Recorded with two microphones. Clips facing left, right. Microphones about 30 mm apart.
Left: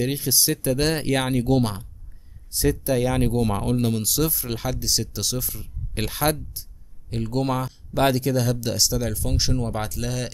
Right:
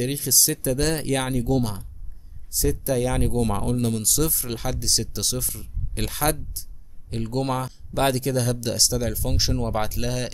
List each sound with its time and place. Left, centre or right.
0.0 s speech: centre
1.4 s speech: left
2.7 s speech: centre
7.1 s speech: centre